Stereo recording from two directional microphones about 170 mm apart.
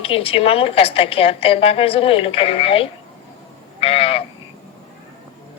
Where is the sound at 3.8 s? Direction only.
35° left (ahead or behind).